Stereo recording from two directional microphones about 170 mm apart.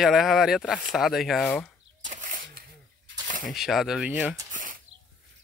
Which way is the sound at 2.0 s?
50° right (ahead or behind).